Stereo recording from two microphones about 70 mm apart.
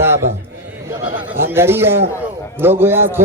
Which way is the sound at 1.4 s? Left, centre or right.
Right.